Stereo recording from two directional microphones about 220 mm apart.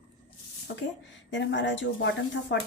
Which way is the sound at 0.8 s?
55° left (ahead or behind).